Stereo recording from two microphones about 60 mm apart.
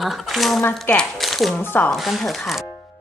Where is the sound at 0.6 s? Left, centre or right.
Left.